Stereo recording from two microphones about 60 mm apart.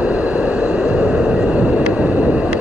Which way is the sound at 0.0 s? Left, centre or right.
Right.